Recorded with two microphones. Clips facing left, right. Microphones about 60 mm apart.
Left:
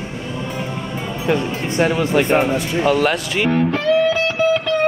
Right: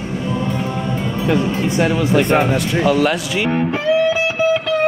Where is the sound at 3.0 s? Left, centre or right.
Left.